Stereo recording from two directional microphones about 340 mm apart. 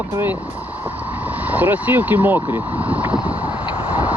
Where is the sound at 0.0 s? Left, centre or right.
Centre.